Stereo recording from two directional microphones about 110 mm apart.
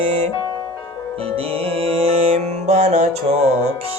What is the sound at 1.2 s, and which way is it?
Music, 60° right (ahead or behind).